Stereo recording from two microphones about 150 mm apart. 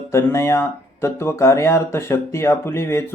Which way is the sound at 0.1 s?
15° left (ahead or behind).